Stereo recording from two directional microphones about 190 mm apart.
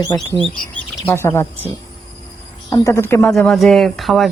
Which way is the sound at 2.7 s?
15° left (ahead or behind).